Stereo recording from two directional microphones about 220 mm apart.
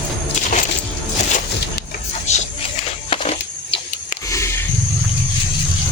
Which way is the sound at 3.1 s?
25° left (ahead or behind).